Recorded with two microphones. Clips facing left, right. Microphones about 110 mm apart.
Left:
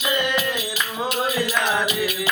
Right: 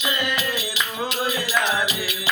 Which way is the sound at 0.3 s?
50° left (ahead or behind).